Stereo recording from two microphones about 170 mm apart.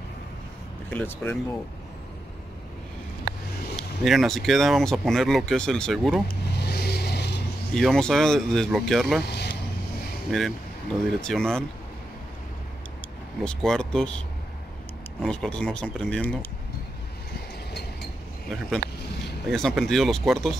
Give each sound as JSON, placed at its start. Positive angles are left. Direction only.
{"t": 0.8, "sound": "speech", "side_deg": 10}
{"t": 3.7, "sound": "speech", "side_deg": 0}
{"t": 6.2, "sound": "vehicle", "side_deg": 70}
{"t": 7.7, "sound": "speech", "side_deg": 5}
{"t": 9.2, "sound": "vehicle", "side_deg": 75}
{"t": 10.3, "sound": "speech", "side_deg": 5}
{"t": 13.4, "sound": "speech", "side_deg": 5}
{"t": 15.2, "sound": "speech", "side_deg": 5}
{"t": 19.4, "sound": "speech", "side_deg": 0}